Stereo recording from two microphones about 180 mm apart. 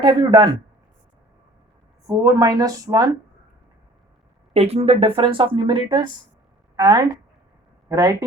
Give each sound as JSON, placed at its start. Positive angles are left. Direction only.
{"t": 0.0, "sound": "speech", "side_deg": -30}
{"t": 2.0, "sound": "speech", "side_deg": -20}
{"t": 4.5, "sound": "a woman's voice", "side_deg": -35}